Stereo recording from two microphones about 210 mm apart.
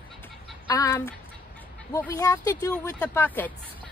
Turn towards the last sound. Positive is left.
turn(degrees=10)  # may be behind; listen again after turning